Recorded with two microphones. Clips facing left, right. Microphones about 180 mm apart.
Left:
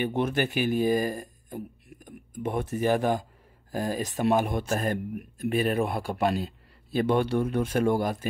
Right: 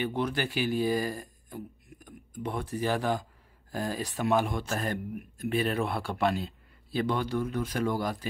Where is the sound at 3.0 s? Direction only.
50° left (ahead or behind).